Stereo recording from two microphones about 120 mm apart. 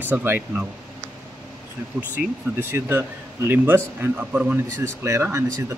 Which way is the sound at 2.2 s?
10° right (ahead or behind).